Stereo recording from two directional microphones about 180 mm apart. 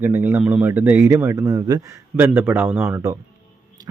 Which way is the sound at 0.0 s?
10° right (ahead or behind).